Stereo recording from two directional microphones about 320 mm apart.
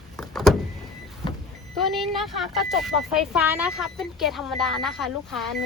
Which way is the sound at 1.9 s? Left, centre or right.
Centre.